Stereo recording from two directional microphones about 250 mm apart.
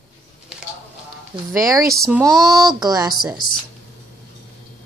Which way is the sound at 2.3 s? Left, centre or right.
Centre.